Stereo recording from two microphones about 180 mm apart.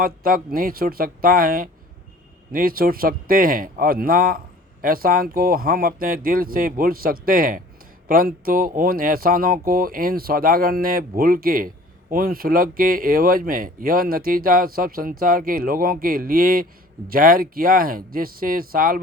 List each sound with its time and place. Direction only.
0.0 s speech: 55° right (ahead or behind)